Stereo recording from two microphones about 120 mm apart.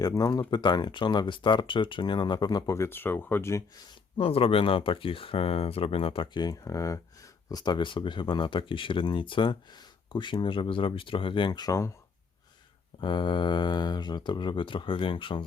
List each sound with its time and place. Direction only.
0.0 s speech: 30° left (ahead or behind)
4.2 s speech: 50° left (ahead or behind); by 11.9 s 30° left (ahead or behind)
13.0 s speech: 40° left (ahead or behind)